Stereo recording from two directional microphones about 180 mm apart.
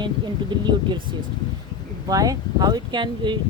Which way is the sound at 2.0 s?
20° right (ahead or behind).